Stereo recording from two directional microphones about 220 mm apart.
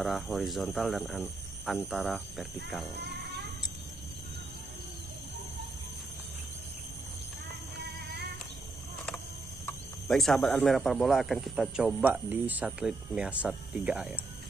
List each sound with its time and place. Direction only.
0.0 s speech: centre (ahead or behind)
9.7 s speech: centre (ahead or behind)